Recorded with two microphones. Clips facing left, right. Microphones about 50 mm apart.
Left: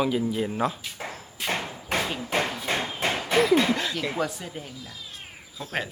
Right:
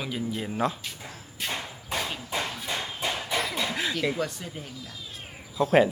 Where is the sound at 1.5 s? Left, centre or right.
Left.